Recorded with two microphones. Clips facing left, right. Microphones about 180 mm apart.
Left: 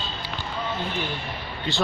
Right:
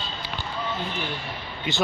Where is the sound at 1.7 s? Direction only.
20° right (ahead or behind).